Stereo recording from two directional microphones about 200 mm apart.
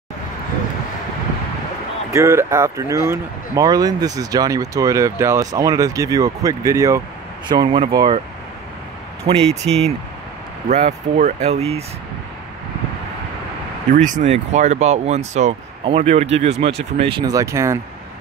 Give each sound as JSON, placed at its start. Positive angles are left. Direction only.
{"t": 2.1, "sound": "speech", "side_deg": -15}
{"t": 9.6, "sound": "speech", "side_deg": -25}
{"t": 13.9, "sound": "speech", "side_deg": -40}